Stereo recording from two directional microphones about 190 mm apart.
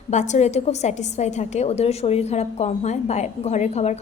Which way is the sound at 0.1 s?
40° left (ahead or behind).